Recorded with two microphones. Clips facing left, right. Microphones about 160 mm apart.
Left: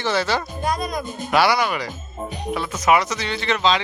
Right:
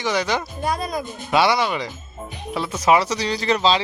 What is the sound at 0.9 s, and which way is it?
Speech, 20° right (ahead or behind).